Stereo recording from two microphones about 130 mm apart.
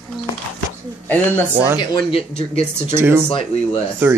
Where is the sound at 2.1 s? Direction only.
45° left (ahead or behind).